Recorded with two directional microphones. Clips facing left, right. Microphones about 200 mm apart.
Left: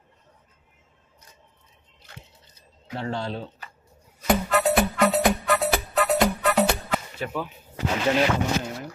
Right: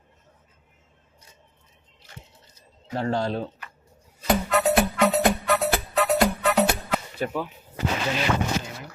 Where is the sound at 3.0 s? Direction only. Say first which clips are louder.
Right 4 dB; 40° right (ahead or behind).